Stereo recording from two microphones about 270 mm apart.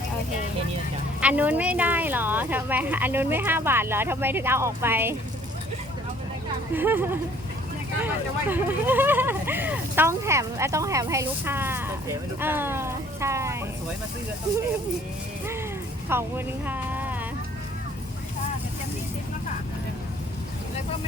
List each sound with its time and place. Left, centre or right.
1.2 s speech: centre
6.7 s speech: centre
16.1 s speech: centre
16.6 s a sound: centre